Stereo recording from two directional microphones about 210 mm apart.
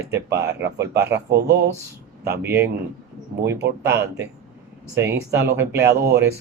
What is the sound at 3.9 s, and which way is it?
Speech, 55° right (ahead or behind).